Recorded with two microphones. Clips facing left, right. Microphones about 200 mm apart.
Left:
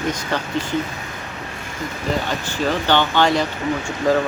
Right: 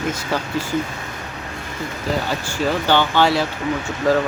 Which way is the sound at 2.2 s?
10° right (ahead or behind).